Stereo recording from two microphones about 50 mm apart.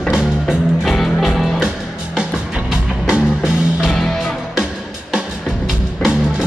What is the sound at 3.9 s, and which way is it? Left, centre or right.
Music, centre.